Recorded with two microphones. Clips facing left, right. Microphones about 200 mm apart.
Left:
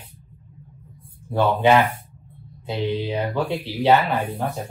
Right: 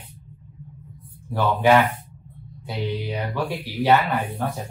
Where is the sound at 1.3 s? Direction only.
20° left (ahead or behind).